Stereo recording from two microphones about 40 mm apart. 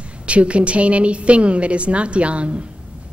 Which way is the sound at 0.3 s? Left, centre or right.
Right.